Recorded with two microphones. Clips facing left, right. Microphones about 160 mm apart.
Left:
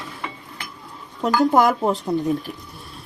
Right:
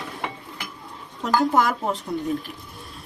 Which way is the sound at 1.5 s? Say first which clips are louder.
Left 4 dB; 40° left (ahead or behind).